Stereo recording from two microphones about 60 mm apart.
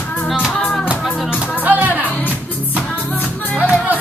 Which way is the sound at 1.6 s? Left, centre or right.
Right.